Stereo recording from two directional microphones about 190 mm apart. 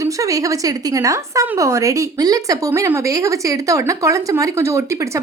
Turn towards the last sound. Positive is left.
turn(degrees=-15)  # may be behind; listen again after turning